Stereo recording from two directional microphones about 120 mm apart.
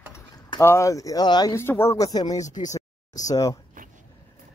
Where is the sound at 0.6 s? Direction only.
25° left (ahead or behind).